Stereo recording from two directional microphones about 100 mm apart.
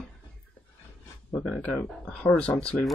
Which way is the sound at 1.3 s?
15° left (ahead or behind).